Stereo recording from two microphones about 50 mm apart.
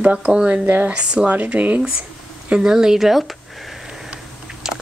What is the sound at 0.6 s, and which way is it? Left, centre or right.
Speech, right.